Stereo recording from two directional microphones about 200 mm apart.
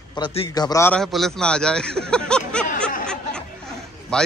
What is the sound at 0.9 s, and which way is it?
A man's voice, centre (ahead or behind).